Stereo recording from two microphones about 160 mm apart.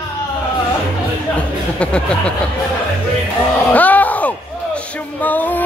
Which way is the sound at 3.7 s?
10° left (ahead or behind).